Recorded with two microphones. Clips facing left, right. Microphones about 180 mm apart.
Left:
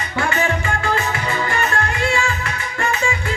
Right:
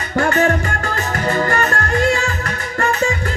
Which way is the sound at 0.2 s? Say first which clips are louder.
Right 5 dB; 45° right (ahead or behind).